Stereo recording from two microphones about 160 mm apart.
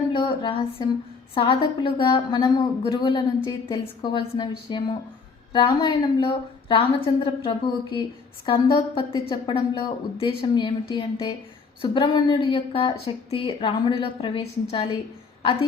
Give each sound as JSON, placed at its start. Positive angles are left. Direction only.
{"t": 0.1, "sound": "a woman's voice", "side_deg": 30}